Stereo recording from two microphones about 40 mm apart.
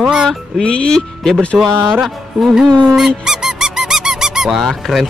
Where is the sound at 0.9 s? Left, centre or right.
Centre.